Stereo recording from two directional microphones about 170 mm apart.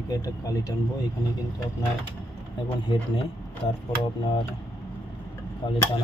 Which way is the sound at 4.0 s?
30° left (ahead or behind).